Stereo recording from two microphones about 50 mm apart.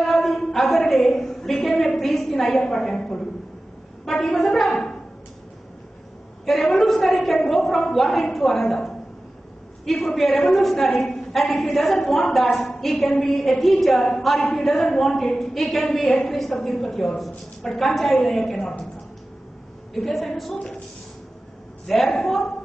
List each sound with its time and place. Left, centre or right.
0.2 s a sound: centre
4.0 s a woman's voice: centre
6.4 s a woman's voice: centre
19.9 s a woman's voice: centre
20.5 s a woman's voice: centre
22.1 s a woman's voice: centre